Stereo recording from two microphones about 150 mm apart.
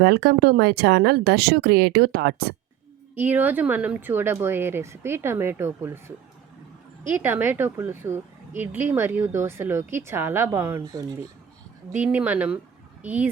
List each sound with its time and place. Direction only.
0.0 s speech: 90° right
3.2 s a woman's voice: 15° right (ahead or behind)